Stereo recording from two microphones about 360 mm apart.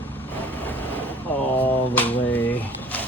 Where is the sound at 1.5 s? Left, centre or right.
Centre.